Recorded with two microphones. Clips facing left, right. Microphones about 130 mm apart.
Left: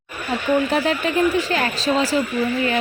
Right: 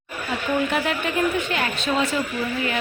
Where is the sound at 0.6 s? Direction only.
35° left (ahead or behind).